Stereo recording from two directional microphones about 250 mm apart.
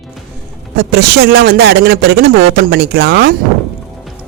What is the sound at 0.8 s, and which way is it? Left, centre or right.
Speech, right.